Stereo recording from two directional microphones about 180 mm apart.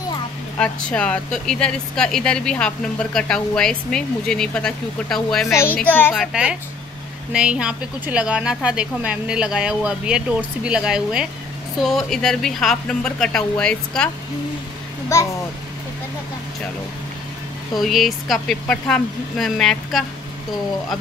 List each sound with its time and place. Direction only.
0.6 s speech: 5° left (ahead or behind)
5.5 s a child's voice: 15° left (ahead or behind)
6.1 s speech: 5° right (ahead or behind)
15.1 s a child's voice: 15° left (ahead or behind)
17.7 s speech: centre (ahead or behind)